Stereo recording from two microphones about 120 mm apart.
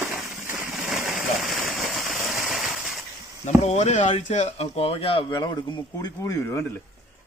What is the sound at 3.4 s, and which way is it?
Speech, 70° left (ahead or behind).